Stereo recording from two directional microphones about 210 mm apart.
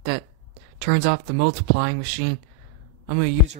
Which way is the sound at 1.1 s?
60° right (ahead or behind).